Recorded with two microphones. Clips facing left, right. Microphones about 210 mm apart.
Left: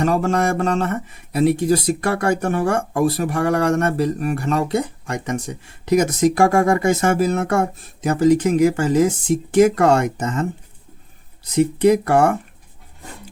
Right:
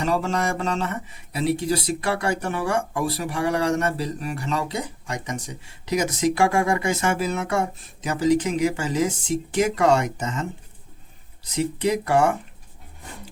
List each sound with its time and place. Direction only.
0.0 s speech: 50° left (ahead or behind)
11.5 s speech: 55° left (ahead or behind)